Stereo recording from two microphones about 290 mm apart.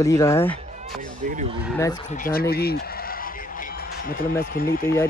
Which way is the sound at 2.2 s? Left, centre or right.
Left.